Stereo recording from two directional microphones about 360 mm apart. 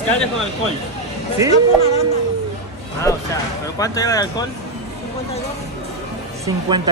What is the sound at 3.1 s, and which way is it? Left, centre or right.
Speech, centre.